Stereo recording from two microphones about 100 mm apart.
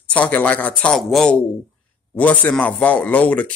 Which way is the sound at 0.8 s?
5° left (ahead or behind).